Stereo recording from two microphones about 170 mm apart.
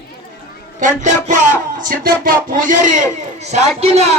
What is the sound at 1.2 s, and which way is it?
Speech, 45° right (ahead or behind).